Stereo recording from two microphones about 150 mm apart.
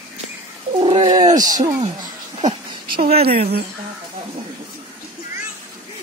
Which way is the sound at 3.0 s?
45° right (ahead or behind).